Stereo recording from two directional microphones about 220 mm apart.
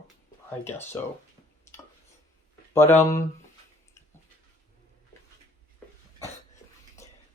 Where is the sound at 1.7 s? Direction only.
10° left (ahead or behind).